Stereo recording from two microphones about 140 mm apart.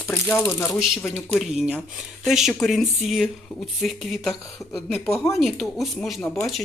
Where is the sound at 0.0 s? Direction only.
15° left (ahead or behind).